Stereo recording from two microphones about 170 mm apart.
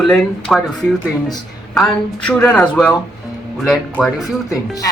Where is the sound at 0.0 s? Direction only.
Centre (ahead or behind).